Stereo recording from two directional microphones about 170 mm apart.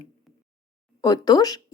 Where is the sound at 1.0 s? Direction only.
20° left (ahead or behind).